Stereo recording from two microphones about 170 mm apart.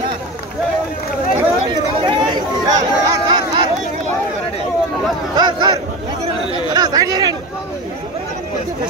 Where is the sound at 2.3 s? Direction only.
25° right (ahead or behind).